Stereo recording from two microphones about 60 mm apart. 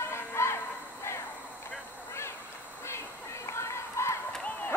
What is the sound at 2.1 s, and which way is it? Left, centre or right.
Duck, left.